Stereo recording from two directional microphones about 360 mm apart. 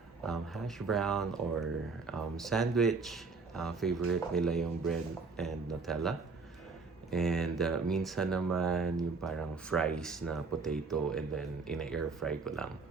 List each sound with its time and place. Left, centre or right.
0.3 s speech: centre